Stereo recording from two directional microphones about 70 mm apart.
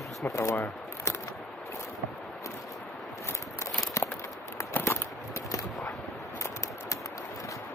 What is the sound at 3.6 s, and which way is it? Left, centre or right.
Walk, left.